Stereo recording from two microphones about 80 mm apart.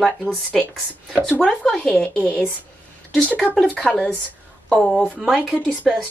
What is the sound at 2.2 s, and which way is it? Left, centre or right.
Speech, centre.